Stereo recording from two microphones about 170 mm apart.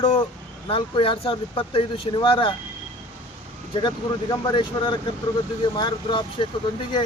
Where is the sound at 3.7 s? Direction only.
25° left (ahead or behind).